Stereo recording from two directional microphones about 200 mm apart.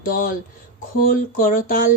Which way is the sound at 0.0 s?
45° left (ahead or behind).